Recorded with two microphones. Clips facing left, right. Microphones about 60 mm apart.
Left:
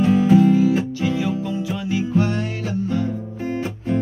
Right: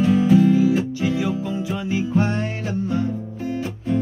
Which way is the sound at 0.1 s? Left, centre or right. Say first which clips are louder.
Left 1 dB; left.